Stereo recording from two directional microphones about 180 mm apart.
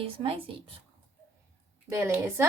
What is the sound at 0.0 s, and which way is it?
Speech, 30° right (ahead or behind).